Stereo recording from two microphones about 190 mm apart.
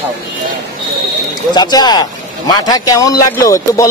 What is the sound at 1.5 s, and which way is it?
Speech, 20° left (ahead or behind).